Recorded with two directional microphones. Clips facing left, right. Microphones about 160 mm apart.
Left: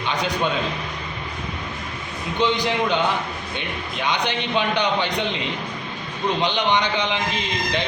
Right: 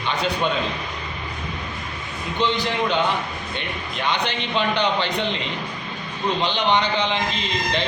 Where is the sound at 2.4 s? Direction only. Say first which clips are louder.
Left 1 dB; 15° left (ahead or behind).